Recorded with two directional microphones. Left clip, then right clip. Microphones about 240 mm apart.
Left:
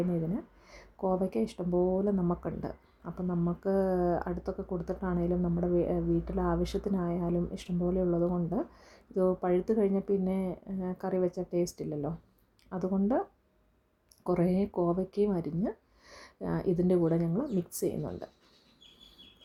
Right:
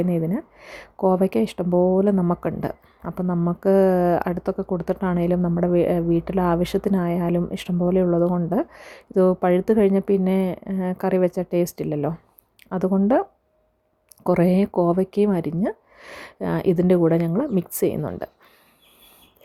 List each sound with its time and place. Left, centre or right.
0.0 s speech: right
14.3 s speech: right